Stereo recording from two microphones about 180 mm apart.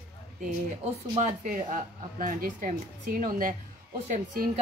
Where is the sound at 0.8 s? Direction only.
40° right (ahead or behind).